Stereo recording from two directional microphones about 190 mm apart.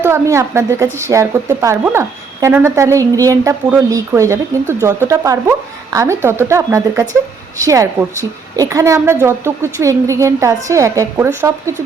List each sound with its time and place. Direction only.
0.0 s a woman's voice: 15° right (ahead or behind)